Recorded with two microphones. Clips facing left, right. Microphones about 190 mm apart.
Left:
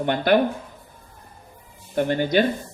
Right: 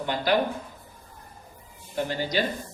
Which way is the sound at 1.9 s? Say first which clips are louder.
Left 7 dB; 55° left (ahead or behind).